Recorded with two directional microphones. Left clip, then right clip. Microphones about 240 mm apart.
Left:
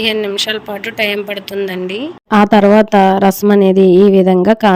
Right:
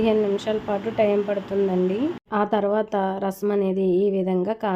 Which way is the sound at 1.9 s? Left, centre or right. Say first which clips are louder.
Left 9 dB; left.